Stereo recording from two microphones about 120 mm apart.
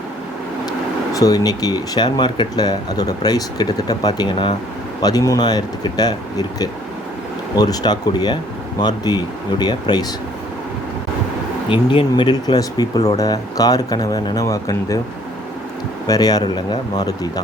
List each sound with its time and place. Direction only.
1.1 s speech: 30° left (ahead or behind)
7.5 s speech: 35° left (ahead or behind)
11.7 s speech: 45° left (ahead or behind); by 15.0 s 30° left (ahead or behind)
16.0 s speech: 30° left (ahead or behind)